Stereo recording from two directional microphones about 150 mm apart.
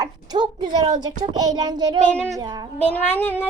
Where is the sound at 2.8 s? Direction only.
10° left (ahead or behind).